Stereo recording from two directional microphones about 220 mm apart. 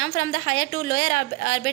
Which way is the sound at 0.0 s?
35° left (ahead or behind).